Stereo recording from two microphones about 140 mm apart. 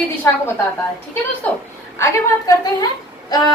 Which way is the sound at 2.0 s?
25° left (ahead or behind).